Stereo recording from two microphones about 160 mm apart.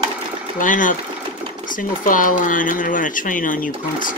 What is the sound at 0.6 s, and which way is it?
Speech, 55° left (ahead or behind).